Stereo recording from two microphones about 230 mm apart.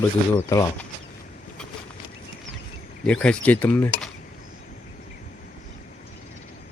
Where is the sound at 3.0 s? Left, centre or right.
Centre.